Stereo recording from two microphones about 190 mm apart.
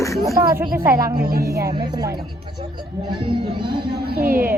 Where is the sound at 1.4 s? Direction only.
15° right (ahead or behind).